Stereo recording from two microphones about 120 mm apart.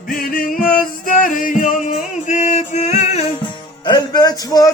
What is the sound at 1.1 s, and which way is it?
Music, 90° left.